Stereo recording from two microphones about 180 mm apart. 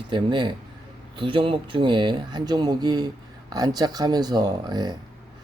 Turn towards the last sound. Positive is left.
turn(degrees=-20)  # may be behind; listen again after turning